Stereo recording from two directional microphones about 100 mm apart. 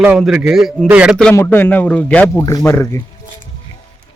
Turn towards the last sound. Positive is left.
turn(degrees=30)  # may be behind; listen again after turning